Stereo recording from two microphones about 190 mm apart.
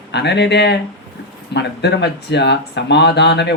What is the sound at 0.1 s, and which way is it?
Speech, 60° left (ahead or behind).